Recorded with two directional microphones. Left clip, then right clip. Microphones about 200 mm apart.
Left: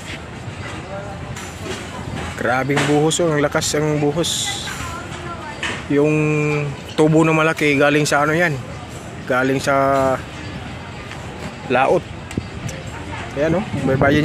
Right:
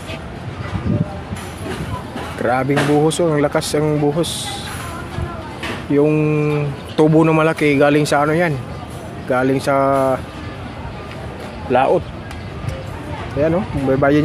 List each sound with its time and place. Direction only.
2.4 s speech: 5° right (ahead or behind)
5.9 s speech: 5° right (ahead or behind)
11.7 s speech: 10° left (ahead or behind)
13.4 s speech: 5° right (ahead or behind)